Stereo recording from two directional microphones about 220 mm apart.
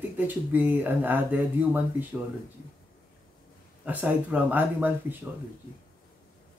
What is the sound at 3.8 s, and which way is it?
Speech, 5° right (ahead or behind).